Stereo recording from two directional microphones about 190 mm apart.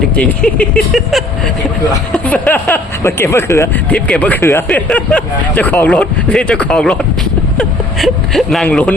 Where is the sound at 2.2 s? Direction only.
5° left (ahead or behind).